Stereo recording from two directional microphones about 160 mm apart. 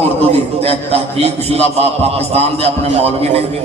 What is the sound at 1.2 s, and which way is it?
A man's voice, 40° right (ahead or behind).